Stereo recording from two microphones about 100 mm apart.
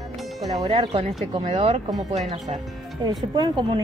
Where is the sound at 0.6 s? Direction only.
65° right (ahead or behind).